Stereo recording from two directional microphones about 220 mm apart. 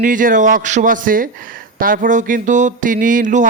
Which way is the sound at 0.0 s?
40° right (ahead or behind).